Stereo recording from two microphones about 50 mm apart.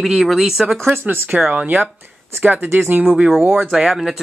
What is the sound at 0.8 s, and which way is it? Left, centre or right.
Speech, right.